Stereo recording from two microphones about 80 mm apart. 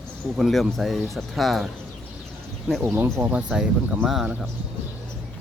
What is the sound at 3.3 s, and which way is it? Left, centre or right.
Speech, centre.